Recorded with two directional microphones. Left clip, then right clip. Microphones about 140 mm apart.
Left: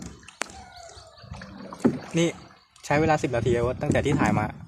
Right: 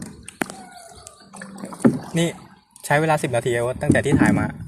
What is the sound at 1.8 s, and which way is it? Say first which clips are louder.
Rowboat: right 6 dB; 35° right (ahead or behind).